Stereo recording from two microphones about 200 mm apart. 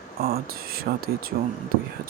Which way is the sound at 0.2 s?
50° right (ahead or behind).